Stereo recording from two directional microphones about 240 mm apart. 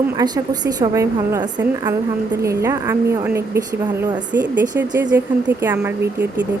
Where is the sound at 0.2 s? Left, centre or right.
Centre.